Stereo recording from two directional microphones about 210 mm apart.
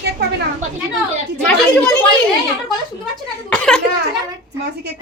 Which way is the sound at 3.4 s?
5° left (ahead or behind).